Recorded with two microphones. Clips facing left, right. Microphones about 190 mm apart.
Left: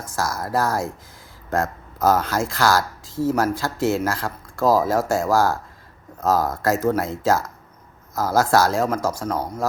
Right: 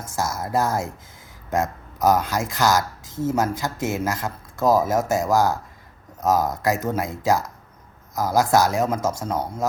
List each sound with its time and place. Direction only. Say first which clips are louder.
0.0 s speech: left 1 dB; 25° right (ahead or behind)